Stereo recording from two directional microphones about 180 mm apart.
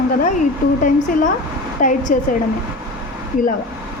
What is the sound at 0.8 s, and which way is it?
A woman's voice, 45° left (ahead or behind).